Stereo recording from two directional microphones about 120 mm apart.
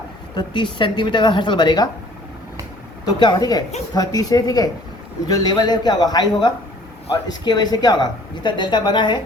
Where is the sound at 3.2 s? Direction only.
35° left (ahead or behind).